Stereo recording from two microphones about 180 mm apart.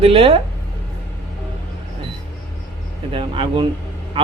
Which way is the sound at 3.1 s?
30° right (ahead or behind).